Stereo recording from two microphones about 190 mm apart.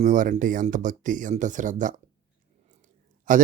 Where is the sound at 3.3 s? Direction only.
45° right (ahead or behind).